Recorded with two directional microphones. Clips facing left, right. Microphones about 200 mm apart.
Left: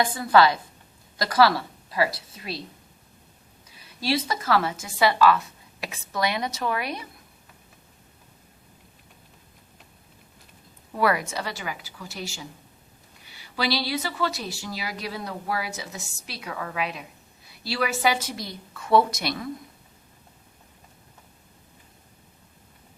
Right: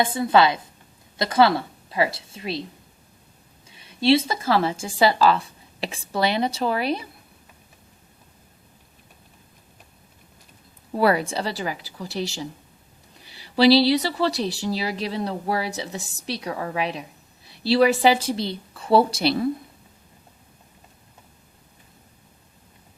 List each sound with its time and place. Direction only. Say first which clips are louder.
0.0 s a woman's voice: right 1 dB; 25° right (ahead or behind)
3.7 s speech: right 8 dB; 25° right (ahead or behind)
10.9 s a woman's voice: right 4 dB; 30° right (ahead or behind)
13.6 s a woman's voice: right 11 dB; 35° right (ahead or behind)